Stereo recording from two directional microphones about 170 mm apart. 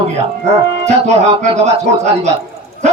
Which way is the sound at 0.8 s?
40° right (ahead or behind).